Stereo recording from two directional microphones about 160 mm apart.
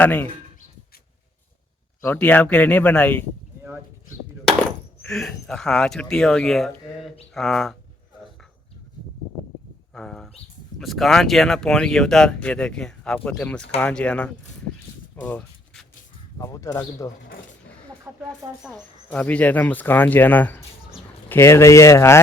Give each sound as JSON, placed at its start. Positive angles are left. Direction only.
{"t": 0.0, "sound": "speech", "side_deg": 10}
{"t": 2.0, "sound": "speech", "side_deg": 10}
{"t": 5.0, "sound": "speech", "side_deg": 5}
{"t": 9.9, "sound": "speech", "side_deg": 5}
{"t": 15.1, "sound": "a sound", "side_deg": 10}
{"t": 16.4, "sound": "speech", "side_deg": 20}
{"t": 18.3, "sound": "speech", "side_deg": 5}